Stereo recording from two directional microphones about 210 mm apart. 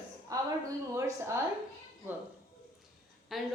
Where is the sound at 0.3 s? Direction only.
15° right (ahead or behind).